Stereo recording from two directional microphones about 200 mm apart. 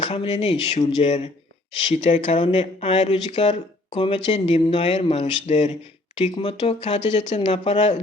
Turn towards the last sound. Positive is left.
turn(degrees=35)  # may be behind; listen again after turning